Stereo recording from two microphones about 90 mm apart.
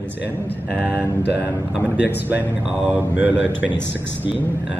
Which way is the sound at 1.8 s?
20° right (ahead or behind).